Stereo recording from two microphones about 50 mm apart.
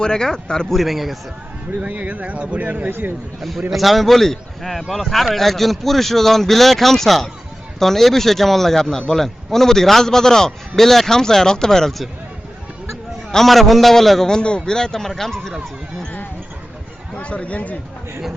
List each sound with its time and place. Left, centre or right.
0.0 s a man's voice: centre
0.7 s speech: centre
1.8 s speech: right
3.7 s a man's voice: centre
13.3 s speech: centre
14.3 s a man's voice: centre
17.2 s speech: left